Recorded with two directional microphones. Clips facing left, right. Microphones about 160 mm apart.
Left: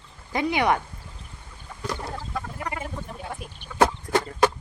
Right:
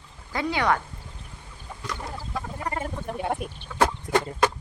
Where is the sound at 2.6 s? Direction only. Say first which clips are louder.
Right 4 dB; 35° right (ahead or behind).